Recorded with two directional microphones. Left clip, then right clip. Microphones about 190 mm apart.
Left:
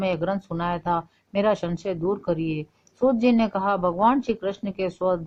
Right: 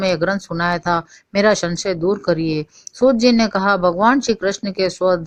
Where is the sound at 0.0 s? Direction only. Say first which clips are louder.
Right 7 dB; 30° right (ahead or behind).